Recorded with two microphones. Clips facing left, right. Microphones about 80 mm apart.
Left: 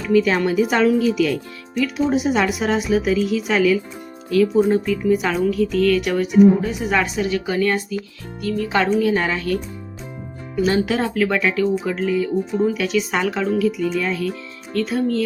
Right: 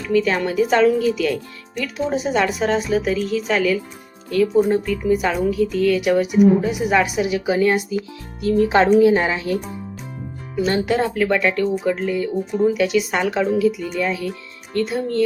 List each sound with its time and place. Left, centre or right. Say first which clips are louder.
0.0 s a woman's voice: left 2 dB; centre
8.5 s speech: right 5 dB; right
9.0 s a woman's voice: right 4 dB; centre
10.5 s speech: even; centre